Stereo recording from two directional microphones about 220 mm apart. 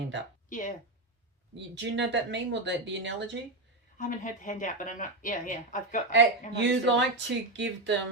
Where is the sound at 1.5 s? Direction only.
55° right (ahead or behind).